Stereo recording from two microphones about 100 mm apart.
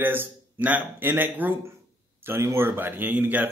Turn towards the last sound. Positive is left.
turn(degrees=-15)  # may be behind; listen again after turning